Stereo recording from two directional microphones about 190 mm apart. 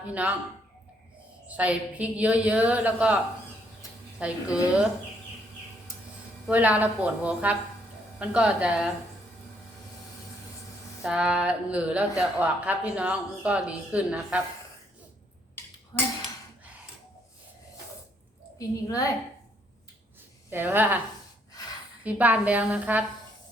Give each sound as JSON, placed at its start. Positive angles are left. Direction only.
{"t": 0.1, "sound": "speech", "side_deg": -5}
{"t": 1.5, "sound": "speech", "side_deg": -5}
{"t": 4.2, "sound": "a sound", "side_deg": -5}
{"t": 6.5, "sound": "speech", "side_deg": -10}
{"t": 8.2, "sound": "a sound", "side_deg": -5}
{"t": 11.0, "sound": "a sound", "side_deg": -5}
{"t": 12.4, "sound": "speech", "side_deg": -5}
{"t": 18.9, "sound": "a woman's voice", "side_deg": 15}
{"t": 20.5, "sound": "speech", "side_deg": -10}
{"t": 22.0, "sound": "speech", "side_deg": -10}